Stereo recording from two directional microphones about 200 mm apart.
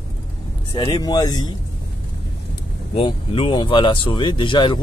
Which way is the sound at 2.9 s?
25° left (ahead or behind).